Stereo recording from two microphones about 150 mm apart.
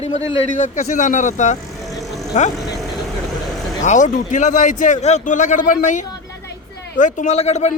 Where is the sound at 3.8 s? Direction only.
55° left (ahead or behind).